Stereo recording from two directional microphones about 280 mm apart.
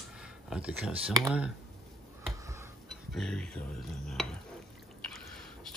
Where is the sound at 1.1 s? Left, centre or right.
Centre.